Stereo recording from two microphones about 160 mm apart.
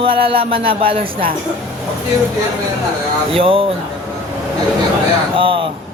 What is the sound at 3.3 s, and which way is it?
Speech, 35° right (ahead or behind).